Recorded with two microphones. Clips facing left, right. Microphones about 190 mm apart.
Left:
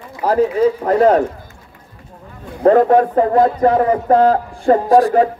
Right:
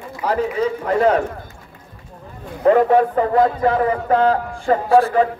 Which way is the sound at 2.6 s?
45° left (ahead or behind).